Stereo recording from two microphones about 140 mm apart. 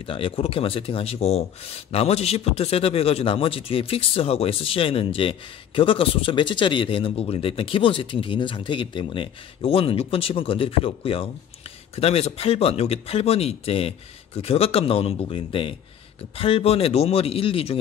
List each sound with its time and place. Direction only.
0.0 s speech: 40° left (ahead or behind)